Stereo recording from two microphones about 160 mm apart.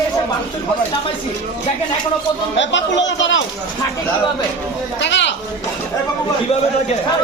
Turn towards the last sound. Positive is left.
turn(degrees=90)